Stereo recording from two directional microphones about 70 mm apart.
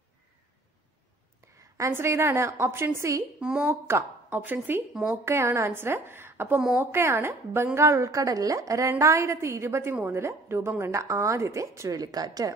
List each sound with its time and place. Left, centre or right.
1.6 s a sound: right
2.0 s a woman's voice: right
3.3 s speech: centre
3.8 s a woman's voice: right
12.0 s speech: right